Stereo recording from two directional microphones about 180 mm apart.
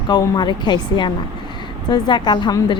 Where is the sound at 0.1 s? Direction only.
25° left (ahead or behind).